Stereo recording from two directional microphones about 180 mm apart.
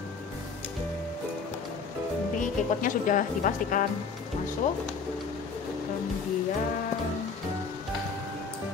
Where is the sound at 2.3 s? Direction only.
45° left (ahead or behind).